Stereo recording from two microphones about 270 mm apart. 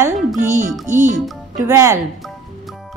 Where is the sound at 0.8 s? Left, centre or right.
Right.